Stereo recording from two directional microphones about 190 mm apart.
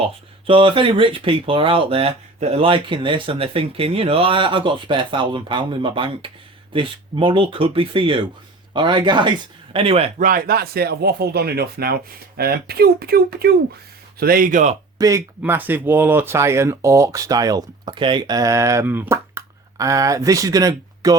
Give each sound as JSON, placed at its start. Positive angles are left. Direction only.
{"t": 0.0, "sound": "speech", "side_deg": -30}
{"t": 10.2, "sound": "speech", "side_deg": -50}
{"t": 14.9, "sound": "speech", "side_deg": -15}